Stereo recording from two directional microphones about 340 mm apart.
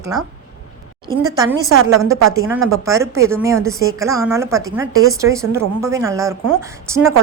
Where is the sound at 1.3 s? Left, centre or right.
Centre.